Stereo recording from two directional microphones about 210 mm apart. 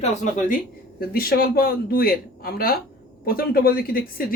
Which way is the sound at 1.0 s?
45° left (ahead or behind).